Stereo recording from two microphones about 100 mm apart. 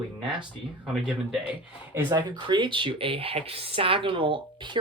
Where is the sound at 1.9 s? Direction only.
25° right (ahead or behind).